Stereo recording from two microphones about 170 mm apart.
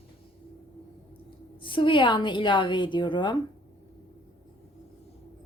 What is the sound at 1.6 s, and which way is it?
A woman's voice, 30° left (ahead or behind).